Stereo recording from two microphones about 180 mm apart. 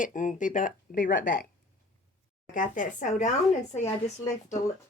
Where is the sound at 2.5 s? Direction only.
45° left (ahead or behind).